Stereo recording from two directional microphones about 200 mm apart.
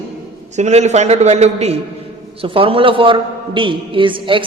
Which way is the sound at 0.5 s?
35° right (ahead or behind).